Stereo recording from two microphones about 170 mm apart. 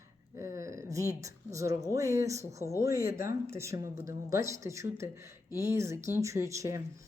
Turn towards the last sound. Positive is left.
turn(degrees=-20)  # may be behind; listen again after turning